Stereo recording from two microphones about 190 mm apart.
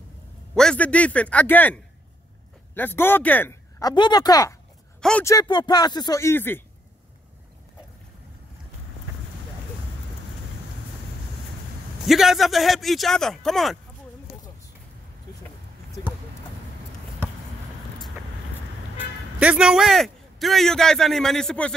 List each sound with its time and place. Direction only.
0.6 s speech: 5° left (ahead or behind)
3.8 s speech: 20° left (ahead or behind)
12.1 s speech: centre (ahead or behind)
18.9 s a man's voice: 5° right (ahead or behind)